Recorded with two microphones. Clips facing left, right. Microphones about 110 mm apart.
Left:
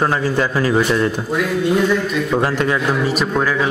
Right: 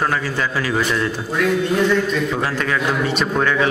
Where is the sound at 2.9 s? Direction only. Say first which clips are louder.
Left 2 dB; 5° left (ahead or behind).